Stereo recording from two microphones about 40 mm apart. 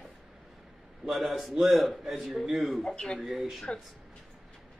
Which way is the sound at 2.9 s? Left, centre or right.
Left.